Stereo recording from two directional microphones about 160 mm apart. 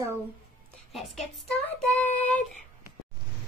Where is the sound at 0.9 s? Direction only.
Centre (ahead or behind).